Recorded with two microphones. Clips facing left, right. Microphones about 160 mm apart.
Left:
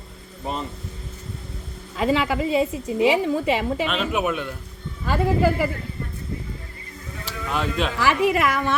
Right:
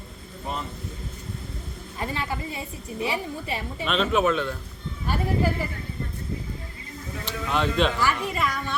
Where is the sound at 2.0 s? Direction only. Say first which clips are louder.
Left 9 dB; 90° left.